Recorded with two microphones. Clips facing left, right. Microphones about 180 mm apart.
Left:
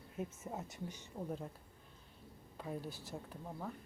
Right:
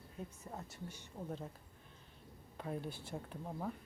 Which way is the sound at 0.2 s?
20° left (ahead or behind).